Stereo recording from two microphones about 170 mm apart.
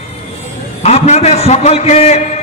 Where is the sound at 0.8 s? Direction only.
40° left (ahead or behind).